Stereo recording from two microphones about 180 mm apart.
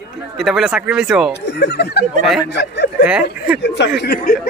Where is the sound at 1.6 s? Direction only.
65° left (ahead or behind).